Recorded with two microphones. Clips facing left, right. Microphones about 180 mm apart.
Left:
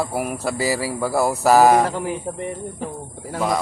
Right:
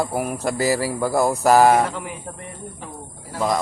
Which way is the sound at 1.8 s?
35° left (ahead or behind).